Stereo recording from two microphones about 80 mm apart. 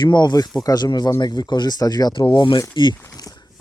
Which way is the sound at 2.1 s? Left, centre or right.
Left.